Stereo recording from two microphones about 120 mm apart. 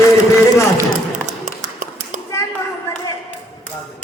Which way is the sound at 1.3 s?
85° right.